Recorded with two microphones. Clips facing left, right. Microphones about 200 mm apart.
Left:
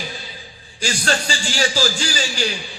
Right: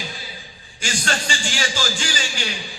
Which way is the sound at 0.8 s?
35° left (ahead or behind).